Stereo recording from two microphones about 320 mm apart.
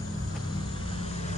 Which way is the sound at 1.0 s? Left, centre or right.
Centre.